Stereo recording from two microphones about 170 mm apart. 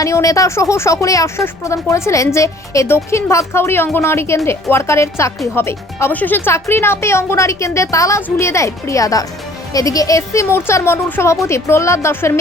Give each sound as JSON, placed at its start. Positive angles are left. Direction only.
{"t": 0.0, "sound": "speech", "side_deg": 20}